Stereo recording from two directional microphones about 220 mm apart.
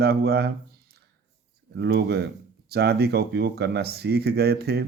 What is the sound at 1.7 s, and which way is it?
Speech, 50° right (ahead or behind).